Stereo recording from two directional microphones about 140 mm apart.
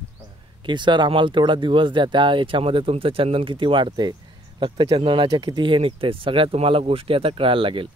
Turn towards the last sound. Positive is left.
turn(degrees=-40)  # may be behind; listen again after turning